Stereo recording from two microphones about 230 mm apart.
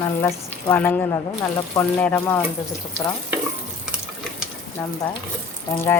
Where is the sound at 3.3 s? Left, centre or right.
Centre.